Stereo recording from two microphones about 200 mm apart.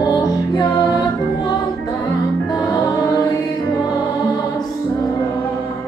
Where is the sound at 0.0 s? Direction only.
20° left (ahead or behind).